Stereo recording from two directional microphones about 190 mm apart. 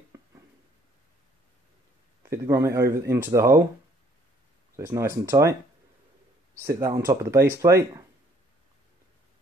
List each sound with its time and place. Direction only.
2.2 s speech: 15° right (ahead or behind)
4.7 s speech: 15° right (ahead or behind)
6.6 s speech: 15° right (ahead or behind)